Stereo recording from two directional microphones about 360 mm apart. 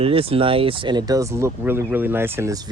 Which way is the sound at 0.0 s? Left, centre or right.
Centre.